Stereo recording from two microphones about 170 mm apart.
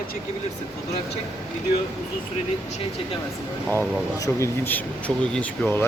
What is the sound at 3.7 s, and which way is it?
Speech, 15° left (ahead or behind).